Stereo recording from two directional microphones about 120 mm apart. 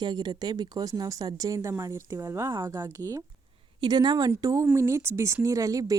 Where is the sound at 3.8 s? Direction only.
35° right (ahead or behind).